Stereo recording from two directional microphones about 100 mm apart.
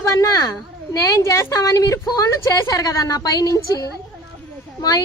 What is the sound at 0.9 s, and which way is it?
A woman's voice, 35° left (ahead or behind).